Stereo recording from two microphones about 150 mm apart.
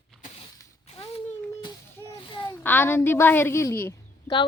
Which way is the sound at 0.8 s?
40° left (ahead or behind).